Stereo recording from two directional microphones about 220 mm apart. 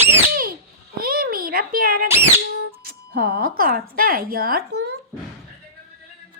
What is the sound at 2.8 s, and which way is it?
Music, 45° right (ahead or behind).